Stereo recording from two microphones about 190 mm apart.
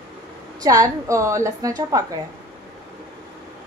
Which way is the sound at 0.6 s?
20° right (ahead or behind).